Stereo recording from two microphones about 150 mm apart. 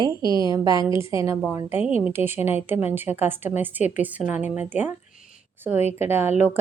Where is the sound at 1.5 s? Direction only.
15° right (ahead or behind).